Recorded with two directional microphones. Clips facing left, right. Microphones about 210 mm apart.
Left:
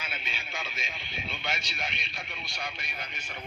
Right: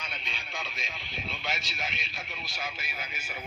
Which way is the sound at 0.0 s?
5° left (ahead or behind).